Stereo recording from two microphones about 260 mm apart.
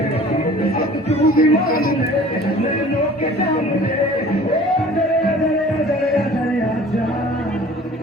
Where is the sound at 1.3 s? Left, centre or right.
Left.